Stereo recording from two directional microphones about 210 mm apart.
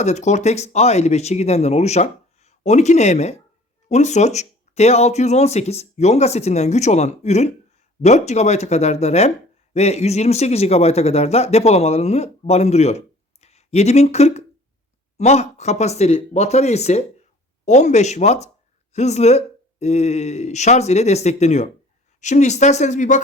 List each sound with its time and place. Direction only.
0.0 s speech: 35° left (ahead or behind)